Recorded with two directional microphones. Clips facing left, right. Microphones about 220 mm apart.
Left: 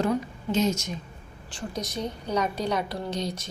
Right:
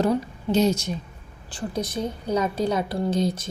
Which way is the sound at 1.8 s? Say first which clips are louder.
Right 4 dB; 55° right (ahead or behind).